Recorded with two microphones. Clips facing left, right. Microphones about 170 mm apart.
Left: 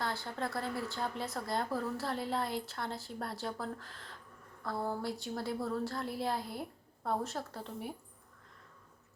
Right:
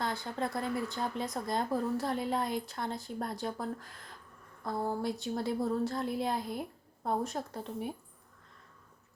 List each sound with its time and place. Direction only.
0.0 s a woman's voice: 15° right (ahead or behind)